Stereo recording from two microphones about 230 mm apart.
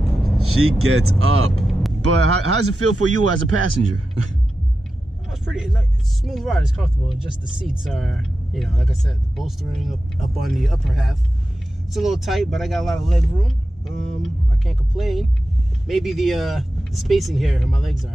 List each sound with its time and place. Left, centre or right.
0.4 s speech: right
1.5 s vehicle: centre
2.0 s a man's voice: right
5.3 s speech: centre